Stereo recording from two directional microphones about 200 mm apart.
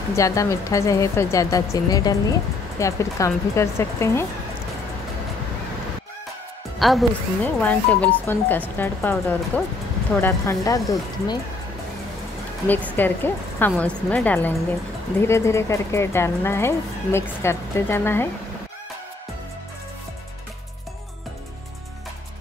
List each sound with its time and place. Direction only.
0.1 s speech: 15° left (ahead or behind)
6.8 s speech: centre (ahead or behind); by 11.3 s 15° left (ahead or behind)
12.6 s speech: 10° left (ahead or behind)